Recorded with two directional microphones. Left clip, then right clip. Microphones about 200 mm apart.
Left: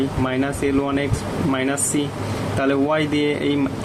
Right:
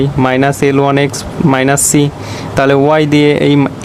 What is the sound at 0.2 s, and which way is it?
Speech, 55° right (ahead or behind).